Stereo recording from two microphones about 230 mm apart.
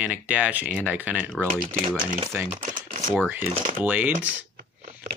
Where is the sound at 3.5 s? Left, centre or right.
Right.